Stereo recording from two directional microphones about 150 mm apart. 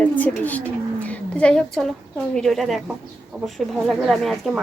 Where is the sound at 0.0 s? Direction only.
10° left (ahead or behind).